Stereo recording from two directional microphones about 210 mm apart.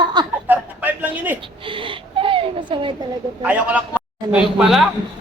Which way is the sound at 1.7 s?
25° right (ahead or behind).